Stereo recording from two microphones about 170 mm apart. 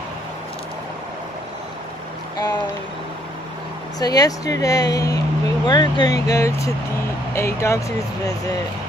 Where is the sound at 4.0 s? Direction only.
20° left (ahead or behind).